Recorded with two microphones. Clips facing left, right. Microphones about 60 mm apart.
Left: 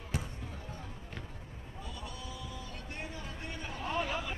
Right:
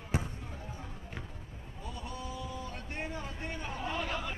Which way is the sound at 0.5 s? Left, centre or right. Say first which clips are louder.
Right 1 dB; centre.